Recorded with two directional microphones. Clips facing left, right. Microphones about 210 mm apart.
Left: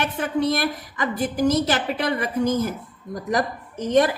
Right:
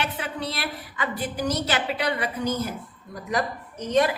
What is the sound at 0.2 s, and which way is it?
A woman's voice, 45° left (ahead or behind).